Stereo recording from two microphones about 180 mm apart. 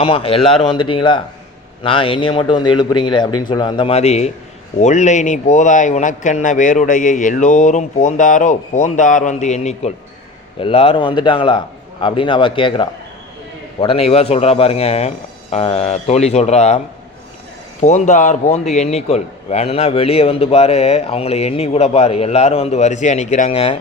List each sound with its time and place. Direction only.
0.0 s a man's voice: 30° left (ahead or behind)